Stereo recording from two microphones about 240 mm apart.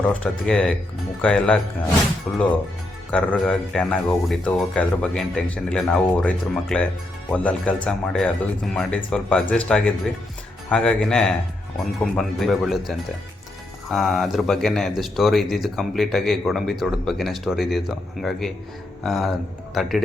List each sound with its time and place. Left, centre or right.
0.0 s speech: centre